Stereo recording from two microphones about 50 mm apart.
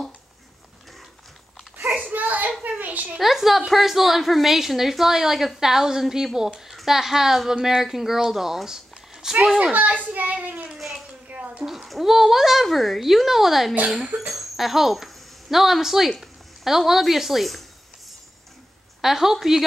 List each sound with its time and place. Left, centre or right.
2.0 s a sound: right
3.2 s a woman's voice: centre
9.6 s a child's voice: right
10.7 s a sound: centre
11.5 s a woman's voice: centre
18.9 s a woman's voice: centre